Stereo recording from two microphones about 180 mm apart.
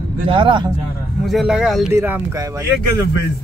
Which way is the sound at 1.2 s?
Centre (ahead or behind).